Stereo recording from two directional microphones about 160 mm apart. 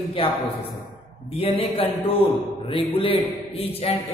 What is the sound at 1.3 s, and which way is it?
A man's voice, 35° left (ahead or behind).